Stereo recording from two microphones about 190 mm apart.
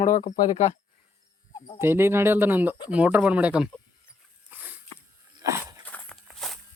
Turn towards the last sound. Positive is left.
turn(degrees=0)  # may be behind; listen again after turning